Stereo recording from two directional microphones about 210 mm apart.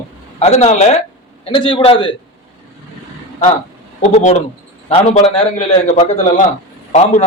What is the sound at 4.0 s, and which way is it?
A man's voice, 35° left (ahead or behind).